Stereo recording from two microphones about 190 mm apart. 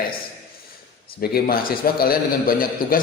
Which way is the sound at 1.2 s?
50° left (ahead or behind).